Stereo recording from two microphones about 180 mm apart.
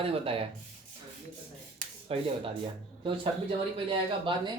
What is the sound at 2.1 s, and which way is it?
Speech, 30° right (ahead or behind).